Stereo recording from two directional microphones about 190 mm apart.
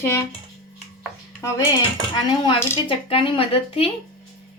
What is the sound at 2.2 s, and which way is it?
Speech, 25° left (ahead or behind).